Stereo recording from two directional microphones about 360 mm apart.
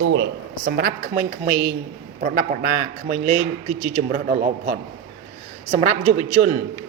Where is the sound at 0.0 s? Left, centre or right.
Right.